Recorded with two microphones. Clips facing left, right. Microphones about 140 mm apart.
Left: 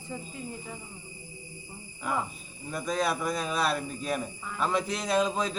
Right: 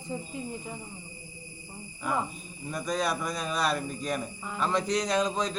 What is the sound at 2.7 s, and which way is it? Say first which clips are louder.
Speech: left 1 dB; centre (ahead or behind).